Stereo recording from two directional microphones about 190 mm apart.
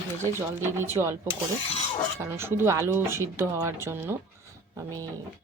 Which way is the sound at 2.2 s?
15° right (ahead or behind).